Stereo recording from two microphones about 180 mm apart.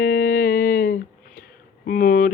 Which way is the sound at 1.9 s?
50° left (ahead or behind).